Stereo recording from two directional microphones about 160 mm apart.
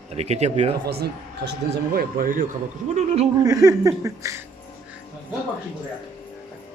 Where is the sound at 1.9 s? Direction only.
60° right (ahead or behind); by 3.3 s 45° right (ahead or behind).